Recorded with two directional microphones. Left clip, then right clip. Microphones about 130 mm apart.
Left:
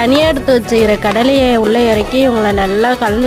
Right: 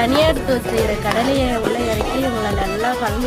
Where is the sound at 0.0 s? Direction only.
90° left.